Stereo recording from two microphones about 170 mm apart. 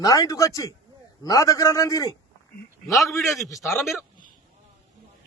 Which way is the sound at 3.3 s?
20° left (ahead or behind).